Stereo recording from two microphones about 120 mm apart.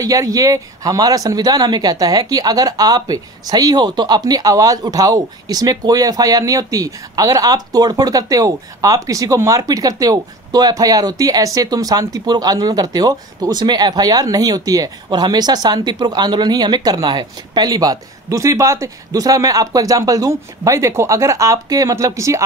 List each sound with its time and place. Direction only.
0.0 s speech: 30° right (ahead or behind)